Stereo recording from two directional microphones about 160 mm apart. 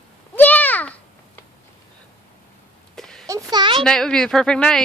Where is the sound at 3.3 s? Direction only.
25° right (ahead or behind).